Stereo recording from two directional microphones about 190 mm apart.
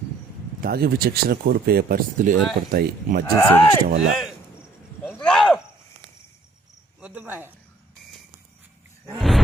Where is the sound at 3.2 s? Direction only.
15° left (ahead or behind).